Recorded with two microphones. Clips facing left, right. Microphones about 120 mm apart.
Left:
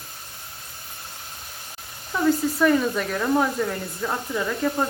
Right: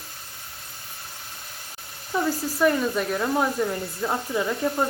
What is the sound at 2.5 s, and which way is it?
A woman's voice, centre (ahead or behind).